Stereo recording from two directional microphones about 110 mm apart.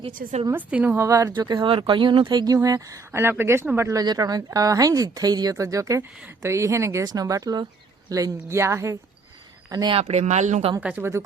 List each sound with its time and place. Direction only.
0.5 s a woman's voice: 15° right (ahead or behind)
1.0 s speech: 30° right (ahead or behind)
1.3 s speech: 40° right (ahead or behind)
10.0 s speech: 85° right
10.8 s a woman's voice: 15° right (ahead or behind)